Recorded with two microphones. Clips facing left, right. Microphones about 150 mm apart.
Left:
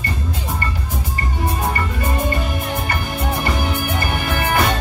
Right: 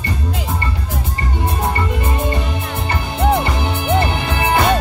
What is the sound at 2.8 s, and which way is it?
Music, 25° right (ahead or behind).